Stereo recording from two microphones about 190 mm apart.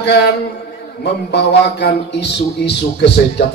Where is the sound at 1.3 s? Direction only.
65° left (ahead or behind).